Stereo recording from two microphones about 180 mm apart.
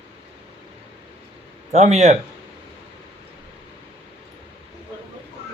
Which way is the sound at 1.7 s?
40° right (ahead or behind).